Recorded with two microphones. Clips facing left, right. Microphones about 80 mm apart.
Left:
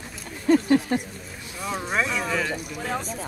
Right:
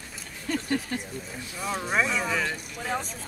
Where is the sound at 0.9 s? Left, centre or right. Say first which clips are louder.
Left 7 dB; left.